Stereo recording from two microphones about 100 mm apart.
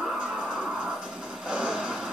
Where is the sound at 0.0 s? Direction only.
5° right (ahead or behind).